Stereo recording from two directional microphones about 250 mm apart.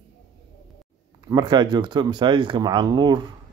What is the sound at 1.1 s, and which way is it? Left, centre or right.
Speech, centre.